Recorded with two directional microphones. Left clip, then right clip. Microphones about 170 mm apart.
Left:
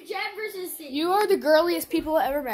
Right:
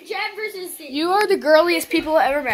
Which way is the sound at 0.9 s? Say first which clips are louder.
Right 4 dB; 10° left (ahead or behind).